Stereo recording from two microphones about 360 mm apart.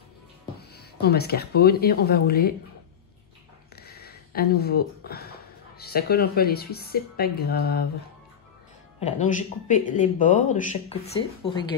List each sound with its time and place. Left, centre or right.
0.6 s speech: left
3.7 s speech: left
9.0 s speech: centre